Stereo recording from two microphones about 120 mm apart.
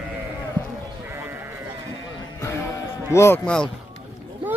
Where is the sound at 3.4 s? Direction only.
5° left (ahead or behind).